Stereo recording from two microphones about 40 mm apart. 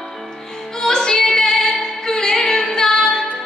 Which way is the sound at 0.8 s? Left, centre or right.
Centre.